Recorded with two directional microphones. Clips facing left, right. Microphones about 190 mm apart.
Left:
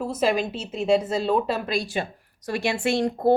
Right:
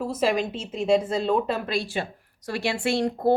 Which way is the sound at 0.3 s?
10° left (ahead or behind).